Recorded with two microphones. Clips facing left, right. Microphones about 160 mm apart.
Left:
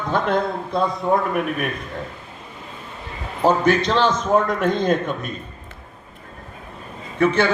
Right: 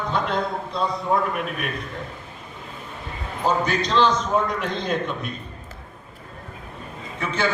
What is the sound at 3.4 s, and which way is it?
A man's voice, 55° left (ahead or behind).